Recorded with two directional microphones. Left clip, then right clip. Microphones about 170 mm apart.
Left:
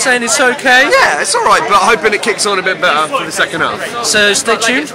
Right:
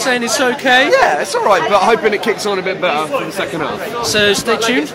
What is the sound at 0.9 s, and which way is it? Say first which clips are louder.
Speech: left 2 dB; 20° right (ahead or behind).